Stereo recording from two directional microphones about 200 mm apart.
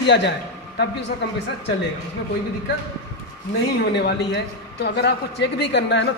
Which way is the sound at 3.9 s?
55° left (ahead or behind).